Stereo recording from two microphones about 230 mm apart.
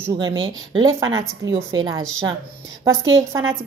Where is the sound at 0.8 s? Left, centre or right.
Centre.